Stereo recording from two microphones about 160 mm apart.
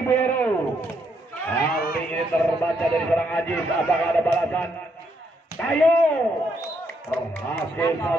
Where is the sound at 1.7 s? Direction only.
70° left (ahead or behind).